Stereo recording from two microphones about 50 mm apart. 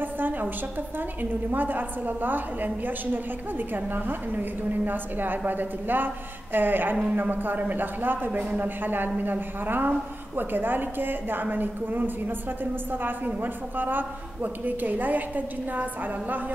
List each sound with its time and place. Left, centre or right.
0.0 s a woman's voice: right